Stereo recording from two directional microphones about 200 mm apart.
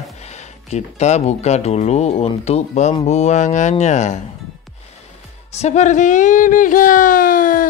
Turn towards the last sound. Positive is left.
turn(degrees=45)  # may be behind; listen again after turning